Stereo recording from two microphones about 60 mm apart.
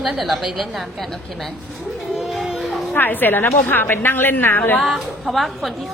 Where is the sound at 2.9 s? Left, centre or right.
Left.